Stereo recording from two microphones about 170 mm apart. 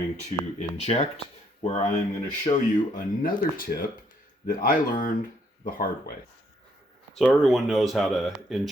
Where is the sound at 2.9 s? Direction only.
55° left (ahead or behind).